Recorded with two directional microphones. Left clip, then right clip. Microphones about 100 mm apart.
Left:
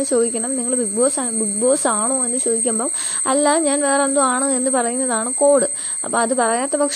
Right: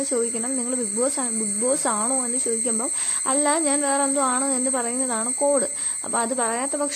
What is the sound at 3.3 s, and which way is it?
Speech, 50° left (ahead or behind).